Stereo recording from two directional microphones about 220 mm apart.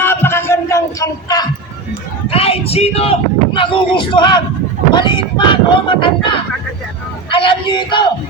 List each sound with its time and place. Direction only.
0.0 s a sound: 10° left (ahead or behind)
2.3 s speech: 25° left (ahead or behind)
7.3 s speech: 25° left (ahead or behind)